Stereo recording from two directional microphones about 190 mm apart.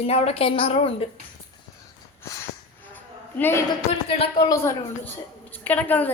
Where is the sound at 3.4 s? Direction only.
10° left (ahead or behind).